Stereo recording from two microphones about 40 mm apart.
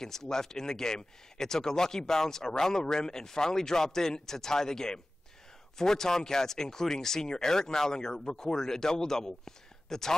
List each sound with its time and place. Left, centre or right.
0.0 s speech: centre